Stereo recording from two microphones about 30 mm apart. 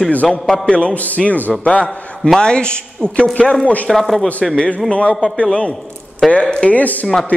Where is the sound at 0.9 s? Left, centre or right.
Left.